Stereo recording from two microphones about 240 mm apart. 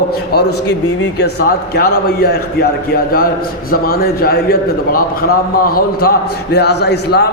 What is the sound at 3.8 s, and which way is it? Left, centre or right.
A man's voice, left.